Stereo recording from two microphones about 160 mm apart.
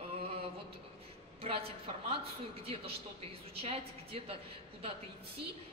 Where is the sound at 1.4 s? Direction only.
35° right (ahead or behind).